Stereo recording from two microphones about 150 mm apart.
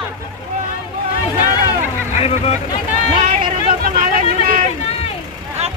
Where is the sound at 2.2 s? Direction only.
40° left (ahead or behind).